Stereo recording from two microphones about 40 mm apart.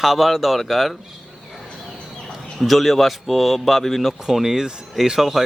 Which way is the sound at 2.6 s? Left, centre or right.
Centre.